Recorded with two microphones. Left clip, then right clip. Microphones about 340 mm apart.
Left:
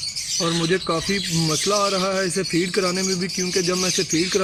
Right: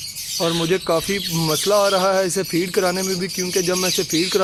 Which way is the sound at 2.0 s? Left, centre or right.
Centre.